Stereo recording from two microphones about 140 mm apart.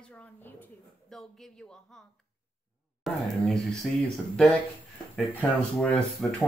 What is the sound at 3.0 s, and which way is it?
A woman's voice, centre (ahead or behind).